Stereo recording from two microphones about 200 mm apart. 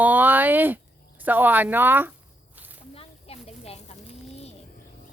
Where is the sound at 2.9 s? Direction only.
30° left (ahead or behind).